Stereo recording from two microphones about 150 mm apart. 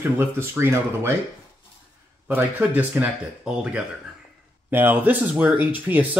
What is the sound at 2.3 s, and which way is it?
Speech, 10° right (ahead or behind).